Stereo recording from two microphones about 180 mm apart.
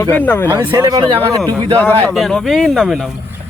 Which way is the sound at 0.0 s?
10° left (ahead or behind).